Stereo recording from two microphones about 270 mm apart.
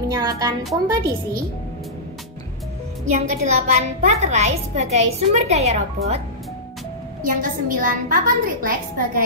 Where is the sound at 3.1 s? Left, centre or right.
Right.